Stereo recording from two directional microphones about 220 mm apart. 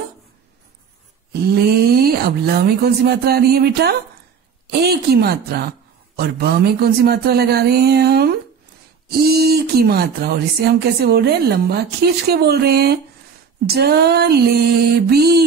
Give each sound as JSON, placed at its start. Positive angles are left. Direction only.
{"t": 1.3, "sound": "speech", "side_deg": -45}